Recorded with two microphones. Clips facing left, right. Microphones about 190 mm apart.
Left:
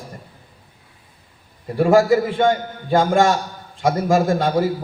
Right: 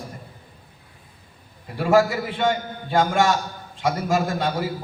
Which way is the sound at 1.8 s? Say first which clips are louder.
Left 5 dB; 40° left (ahead or behind).